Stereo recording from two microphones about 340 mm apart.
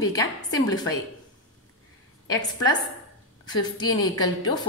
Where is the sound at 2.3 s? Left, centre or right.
Centre.